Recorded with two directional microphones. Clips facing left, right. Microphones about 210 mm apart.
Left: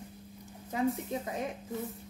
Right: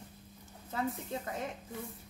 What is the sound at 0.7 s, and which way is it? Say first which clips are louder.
Speech: left 5 dB; 15° left (ahead or behind).